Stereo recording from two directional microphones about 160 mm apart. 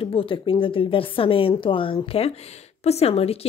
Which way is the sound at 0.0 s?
35° left (ahead or behind).